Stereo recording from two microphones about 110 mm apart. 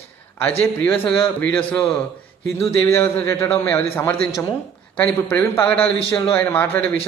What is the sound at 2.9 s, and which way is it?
A man's voice, 20° left (ahead or behind).